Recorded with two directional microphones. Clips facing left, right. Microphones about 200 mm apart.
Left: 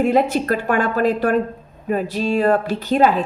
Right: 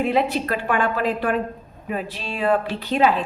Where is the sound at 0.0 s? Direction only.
45° left (ahead or behind).